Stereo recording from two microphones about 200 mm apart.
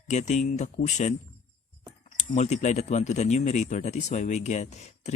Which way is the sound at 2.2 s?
35° left (ahead or behind).